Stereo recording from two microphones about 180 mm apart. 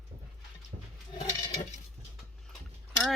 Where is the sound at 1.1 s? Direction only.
40° left (ahead or behind).